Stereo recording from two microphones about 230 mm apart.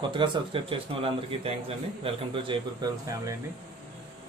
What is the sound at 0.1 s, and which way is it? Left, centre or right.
Speech, right.